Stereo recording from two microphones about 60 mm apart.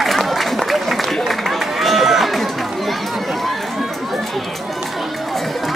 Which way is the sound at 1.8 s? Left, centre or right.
Centre.